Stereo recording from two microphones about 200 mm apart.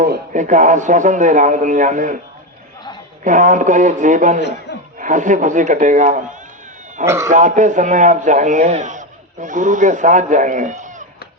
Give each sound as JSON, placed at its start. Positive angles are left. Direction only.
{"t": 0.0, "sound": "a man's voice", "side_deg": -40}
{"t": 3.2, "sound": "a man's voice", "side_deg": -40}
{"t": 4.4, "sound": "a man's voice", "side_deg": 60}
{"t": 4.9, "sound": "a man's voice", "side_deg": -40}
{"t": 7.0, "sound": "speech", "side_deg": -15}
{"t": 7.3, "sound": "a man's voice", "side_deg": -40}